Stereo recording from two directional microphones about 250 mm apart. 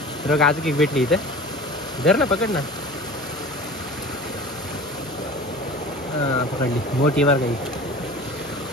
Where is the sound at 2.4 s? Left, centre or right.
Centre.